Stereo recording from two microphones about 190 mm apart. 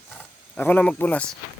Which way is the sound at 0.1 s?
10° left (ahead or behind).